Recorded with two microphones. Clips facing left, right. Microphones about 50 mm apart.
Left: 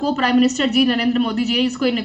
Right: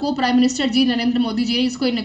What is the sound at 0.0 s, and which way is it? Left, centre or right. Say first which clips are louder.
A woman's voice: left 1 dB; left.